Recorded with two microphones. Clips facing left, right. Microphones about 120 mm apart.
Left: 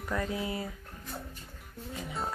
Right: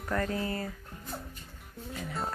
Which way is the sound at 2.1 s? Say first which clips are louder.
Even; centre (ahead or behind).